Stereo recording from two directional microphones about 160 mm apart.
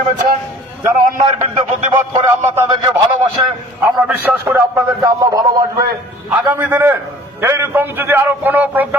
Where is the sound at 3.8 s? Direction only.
15° right (ahead or behind).